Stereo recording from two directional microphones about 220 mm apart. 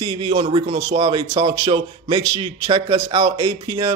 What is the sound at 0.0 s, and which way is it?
A man's voice, 20° right (ahead or behind).